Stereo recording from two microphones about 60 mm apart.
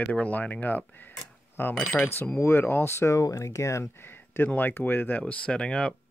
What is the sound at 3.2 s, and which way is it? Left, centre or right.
Speech, left.